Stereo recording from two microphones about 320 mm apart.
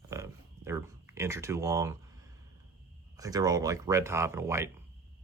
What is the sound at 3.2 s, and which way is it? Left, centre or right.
Speech, centre.